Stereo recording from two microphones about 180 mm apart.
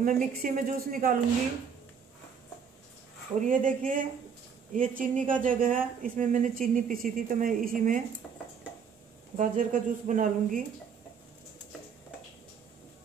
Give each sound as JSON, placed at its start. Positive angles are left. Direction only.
{"t": 0.0, "sound": "speech", "side_deg": -50}
{"t": 3.3, "sound": "speech", "side_deg": -45}
{"t": 9.4, "sound": "speech", "side_deg": -45}